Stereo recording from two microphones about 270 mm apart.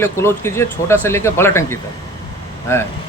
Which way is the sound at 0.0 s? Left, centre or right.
Centre.